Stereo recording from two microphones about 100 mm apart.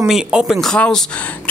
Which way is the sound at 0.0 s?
10° right (ahead or behind).